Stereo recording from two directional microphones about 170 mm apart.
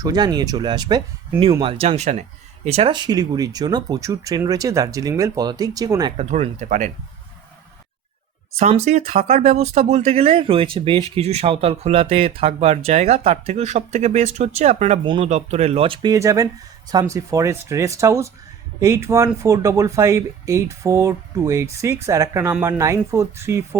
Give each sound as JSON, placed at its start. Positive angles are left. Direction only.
{"t": 0.0, "sound": "speech", "side_deg": -25}
{"t": 6.1, "sound": "speech", "side_deg": -40}
{"t": 8.5, "sound": "speech", "side_deg": -40}